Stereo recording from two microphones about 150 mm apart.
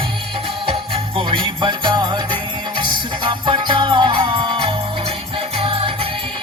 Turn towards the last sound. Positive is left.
turn(degrees=-40)  # may be behind; listen again after turning